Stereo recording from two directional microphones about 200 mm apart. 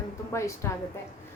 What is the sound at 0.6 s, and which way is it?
Speech, 15° left (ahead or behind).